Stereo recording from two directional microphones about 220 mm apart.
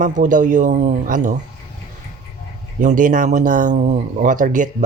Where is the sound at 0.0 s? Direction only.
35° right (ahead or behind).